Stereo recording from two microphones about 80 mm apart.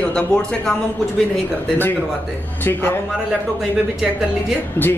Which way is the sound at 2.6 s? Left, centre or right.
Left.